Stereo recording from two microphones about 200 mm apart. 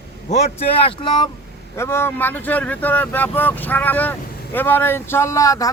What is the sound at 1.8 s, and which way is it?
A man's voice, 10° left (ahead or behind).